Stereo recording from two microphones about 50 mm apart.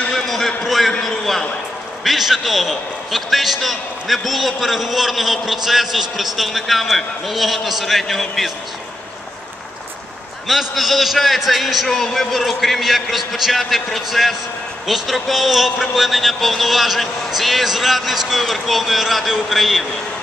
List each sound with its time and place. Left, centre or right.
0.1 s a sound: centre
2.0 s a man's voice: centre
10.5 s a man's voice: centre